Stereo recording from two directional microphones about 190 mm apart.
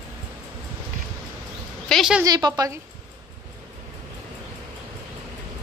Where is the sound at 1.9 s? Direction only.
Centre (ahead or behind).